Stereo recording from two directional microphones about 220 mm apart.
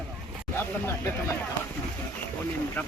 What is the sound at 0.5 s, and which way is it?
Speech, 10° left (ahead or behind).